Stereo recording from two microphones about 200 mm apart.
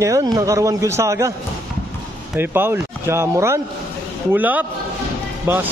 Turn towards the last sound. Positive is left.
turn(degrees=-10)  # may be behind; listen again after turning